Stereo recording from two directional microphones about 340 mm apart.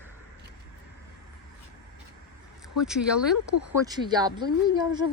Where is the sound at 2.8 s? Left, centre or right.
Centre.